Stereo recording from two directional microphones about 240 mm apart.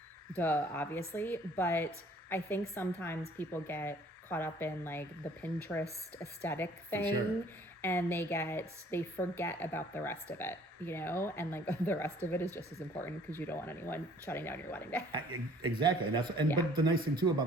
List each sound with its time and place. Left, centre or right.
0.3 s a woman's voice: centre
15.1 s a man's voice: centre